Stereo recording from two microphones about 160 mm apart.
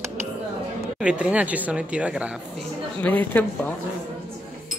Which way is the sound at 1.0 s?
5° right (ahead or behind).